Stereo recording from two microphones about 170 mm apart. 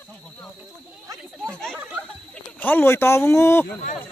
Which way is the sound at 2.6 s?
10° left (ahead or behind).